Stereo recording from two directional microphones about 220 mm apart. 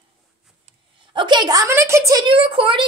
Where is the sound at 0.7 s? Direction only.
20° right (ahead or behind).